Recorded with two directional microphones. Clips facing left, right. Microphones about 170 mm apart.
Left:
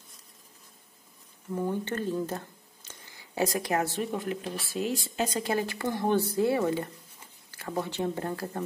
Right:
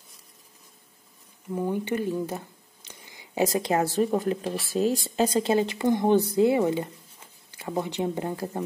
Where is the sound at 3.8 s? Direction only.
40° right (ahead or behind); by 8.6 s 15° right (ahead or behind).